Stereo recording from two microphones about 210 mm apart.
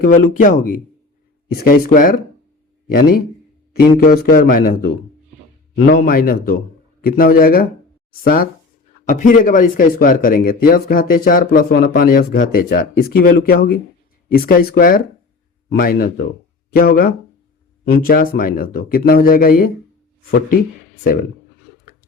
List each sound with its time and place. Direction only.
0.0 s speech: 40° left (ahead or behind)